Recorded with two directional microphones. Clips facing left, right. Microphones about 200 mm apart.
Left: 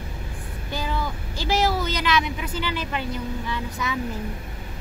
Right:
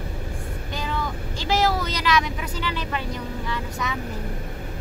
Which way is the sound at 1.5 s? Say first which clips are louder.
Even; 30° left (ahead or behind).